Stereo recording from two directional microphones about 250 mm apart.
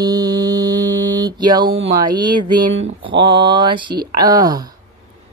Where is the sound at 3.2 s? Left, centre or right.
Centre.